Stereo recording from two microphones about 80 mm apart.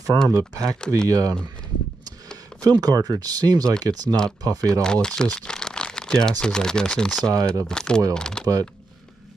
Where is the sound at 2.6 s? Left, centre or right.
Right.